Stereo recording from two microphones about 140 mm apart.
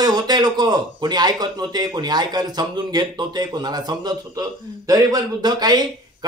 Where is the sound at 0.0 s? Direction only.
30° right (ahead or behind).